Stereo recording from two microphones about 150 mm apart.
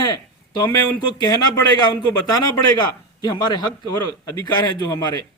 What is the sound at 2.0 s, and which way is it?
Speech, 25° left (ahead or behind).